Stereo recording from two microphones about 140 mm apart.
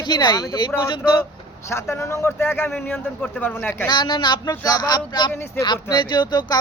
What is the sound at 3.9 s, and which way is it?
Speech, 35° left (ahead or behind).